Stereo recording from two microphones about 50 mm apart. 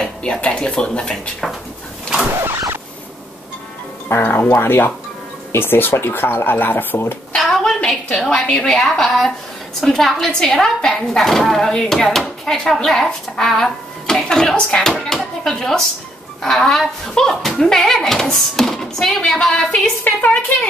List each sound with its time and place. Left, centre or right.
0.0 s a woman's voice: centre
4.1 s speech: left
7.3 s a sound: centre
8.2 s a woman's voice: centre
20.0 s a woman's voice: left